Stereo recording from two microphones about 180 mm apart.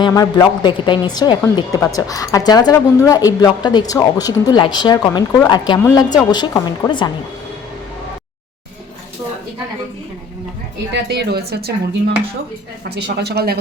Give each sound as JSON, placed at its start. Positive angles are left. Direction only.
{"t": 0.0, "sound": "speech", "side_deg": 20}
{"t": 10.9, "sound": "speech", "side_deg": -70}